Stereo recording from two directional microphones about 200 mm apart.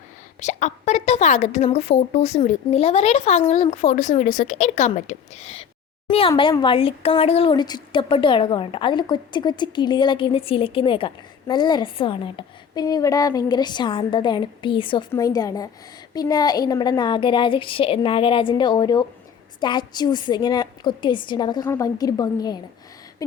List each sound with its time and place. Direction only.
0.3 s a woman's voice: 35° left (ahead or behind); by 22.6 s 20° left (ahead or behind)